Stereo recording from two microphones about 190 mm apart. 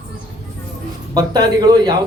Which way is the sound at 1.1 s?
20° right (ahead or behind).